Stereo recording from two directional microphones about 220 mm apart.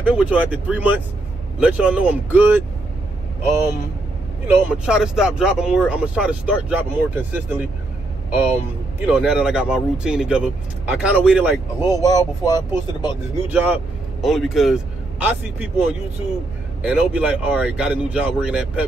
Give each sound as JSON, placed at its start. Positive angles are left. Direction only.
{"t": 0.0, "sound": "speech", "side_deg": -5}
{"t": 4.5, "sound": "speech", "side_deg": -5}
{"t": 9.0, "sound": "speech", "side_deg": -5}
{"t": 11.8, "sound": "speech", "side_deg": 15}
{"t": 13.5, "sound": "a man's voice", "side_deg": -5}
{"t": 16.8, "sound": "speech", "side_deg": -5}